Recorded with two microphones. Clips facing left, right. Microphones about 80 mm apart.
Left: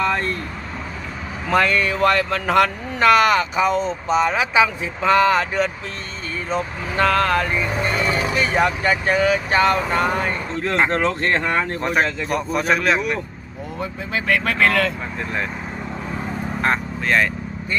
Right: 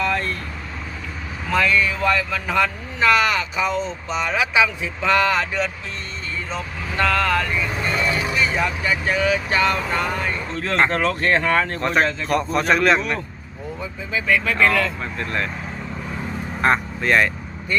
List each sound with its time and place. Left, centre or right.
1.5 s speech: left
3.1 s speech: left
7.0 s speech: left
7.4 s speech: left
8.5 s speech: left
10.7 s speech: centre
12.3 s a man's voice: centre
13.7 s speech: left
15.2 s speech: centre
16.6 s speech: centre